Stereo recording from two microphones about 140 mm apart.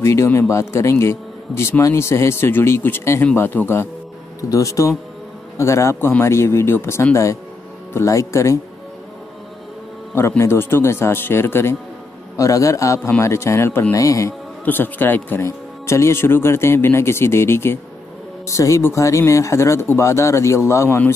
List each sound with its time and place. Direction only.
0.0 s speech: 20° left (ahead or behind)
10.1 s speech: 20° left (ahead or behind)